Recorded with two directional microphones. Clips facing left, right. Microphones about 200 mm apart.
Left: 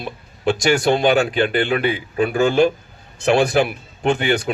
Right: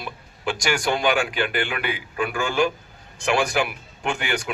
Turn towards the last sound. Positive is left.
turn(degrees=35)  # may be behind; listen again after turning